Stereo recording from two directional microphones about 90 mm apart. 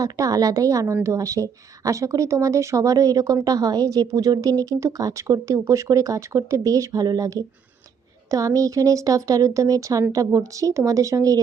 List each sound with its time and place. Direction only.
0.0 s a woman's voice: 45° right (ahead or behind)